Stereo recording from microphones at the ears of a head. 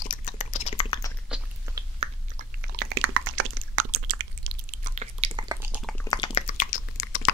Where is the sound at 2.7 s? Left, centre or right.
Right.